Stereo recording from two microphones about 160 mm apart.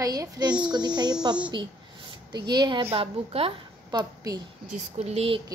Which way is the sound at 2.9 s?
35° right (ahead or behind).